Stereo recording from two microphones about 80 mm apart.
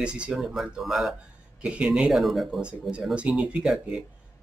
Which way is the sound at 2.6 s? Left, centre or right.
Centre.